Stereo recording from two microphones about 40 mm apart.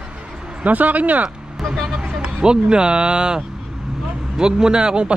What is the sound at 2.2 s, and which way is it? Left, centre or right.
Speech, right.